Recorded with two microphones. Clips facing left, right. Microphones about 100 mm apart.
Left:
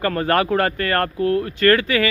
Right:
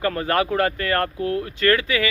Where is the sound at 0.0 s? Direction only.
55° left (ahead or behind).